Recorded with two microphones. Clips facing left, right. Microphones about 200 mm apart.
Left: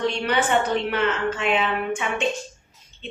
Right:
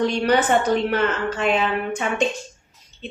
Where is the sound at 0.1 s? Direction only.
40° right (ahead or behind).